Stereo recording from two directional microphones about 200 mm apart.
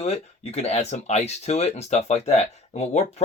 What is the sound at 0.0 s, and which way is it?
Speech, 30° left (ahead or behind).